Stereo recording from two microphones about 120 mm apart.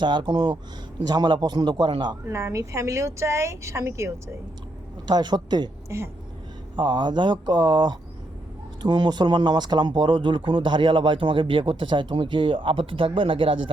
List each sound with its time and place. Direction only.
0.0 s speech: 40° right (ahead or behind)
2.2 s speech: 25° right (ahead or behind)
5.0 s speech: 40° right (ahead or behind)
6.7 s speech: 40° right (ahead or behind)